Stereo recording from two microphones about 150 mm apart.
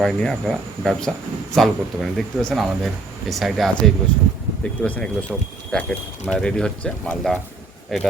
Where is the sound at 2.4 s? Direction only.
5° left (ahead or behind).